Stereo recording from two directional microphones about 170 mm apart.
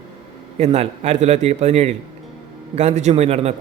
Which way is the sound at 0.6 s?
35° right (ahead or behind).